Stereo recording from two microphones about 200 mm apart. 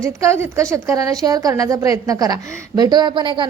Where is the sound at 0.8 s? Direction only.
15° right (ahead or behind).